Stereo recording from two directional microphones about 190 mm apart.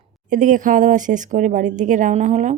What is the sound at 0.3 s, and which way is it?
A woman's voice, 45° right (ahead or behind).